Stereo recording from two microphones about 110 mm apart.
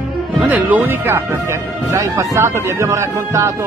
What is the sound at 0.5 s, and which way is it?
Speech, 15° right (ahead or behind).